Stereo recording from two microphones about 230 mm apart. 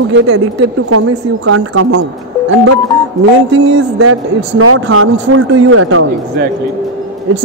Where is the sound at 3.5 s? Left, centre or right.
Right.